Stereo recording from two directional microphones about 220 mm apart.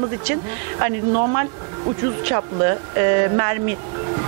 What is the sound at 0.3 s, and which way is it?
Speech, 15° right (ahead or behind).